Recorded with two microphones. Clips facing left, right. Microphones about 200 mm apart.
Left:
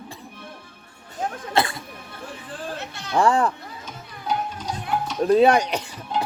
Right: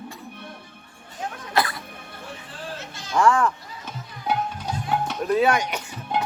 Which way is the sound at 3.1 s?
35° left (ahead or behind).